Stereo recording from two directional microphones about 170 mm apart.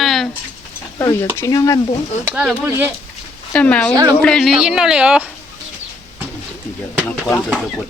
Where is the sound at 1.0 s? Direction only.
15° left (ahead or behind).